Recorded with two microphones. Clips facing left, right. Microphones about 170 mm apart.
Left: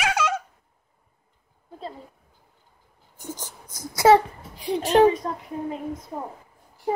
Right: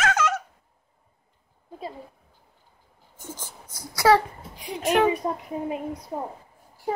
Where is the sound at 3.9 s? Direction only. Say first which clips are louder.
Left 3 dB; 20° left (ahead or behind).